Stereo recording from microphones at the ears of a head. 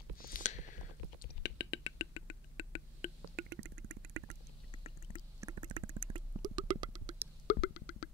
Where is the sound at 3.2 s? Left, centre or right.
Right.